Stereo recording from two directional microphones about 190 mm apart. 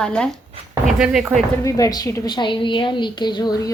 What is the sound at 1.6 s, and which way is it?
A woman's voice, 20° left (ahead or behind).